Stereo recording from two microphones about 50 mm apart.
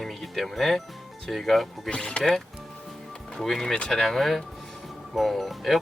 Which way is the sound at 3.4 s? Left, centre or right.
Centre.